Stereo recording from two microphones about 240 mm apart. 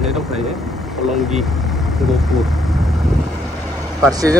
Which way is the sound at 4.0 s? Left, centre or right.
Centre.